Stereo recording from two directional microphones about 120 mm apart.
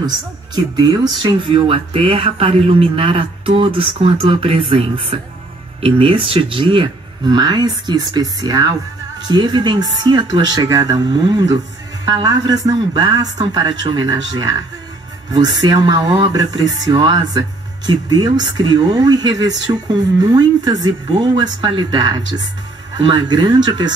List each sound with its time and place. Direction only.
0.7 s speech: 35° right (ahead or behind)